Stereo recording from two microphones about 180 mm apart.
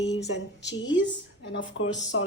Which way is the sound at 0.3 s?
85° left.